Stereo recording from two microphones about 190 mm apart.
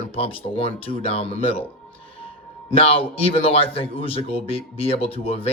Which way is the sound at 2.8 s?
30° left (ahead or behind).